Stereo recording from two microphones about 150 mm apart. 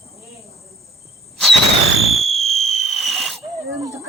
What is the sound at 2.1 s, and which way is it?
Fireworks, centre (ahead or behind).